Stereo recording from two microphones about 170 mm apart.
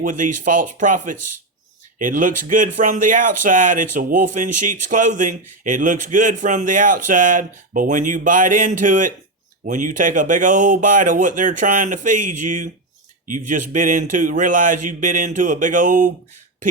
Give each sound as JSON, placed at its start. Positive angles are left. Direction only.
{"t": 0.0, "sound": "speech", "side_deg": -50}